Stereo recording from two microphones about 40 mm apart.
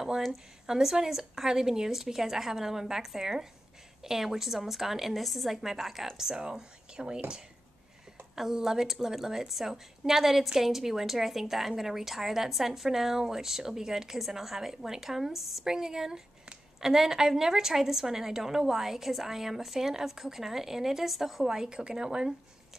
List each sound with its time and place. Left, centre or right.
0.7 s a woman's voice: centre
6.1 s a woman's voice: centre
8.4 s a woman's voice: centre